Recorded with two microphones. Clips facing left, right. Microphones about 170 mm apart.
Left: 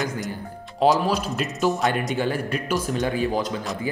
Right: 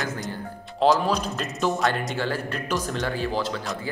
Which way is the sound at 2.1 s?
15° left (ahead or behind).